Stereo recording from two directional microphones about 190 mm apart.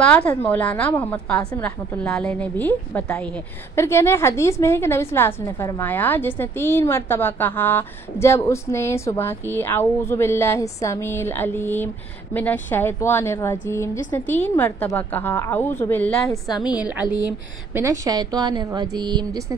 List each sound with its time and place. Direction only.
0.0 s a woman's voice: 5° left (ahead or behind)
16.4 s a woman's voice: 20° left (ahead or behind)
16.7 s a woman's voice: 10° right (ahead or behind)